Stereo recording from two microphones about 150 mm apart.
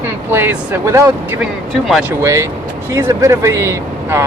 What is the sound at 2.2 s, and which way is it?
Speech, 20° right (ahead or behind).